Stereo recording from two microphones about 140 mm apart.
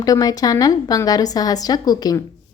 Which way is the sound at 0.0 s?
25° left (ahead or behind).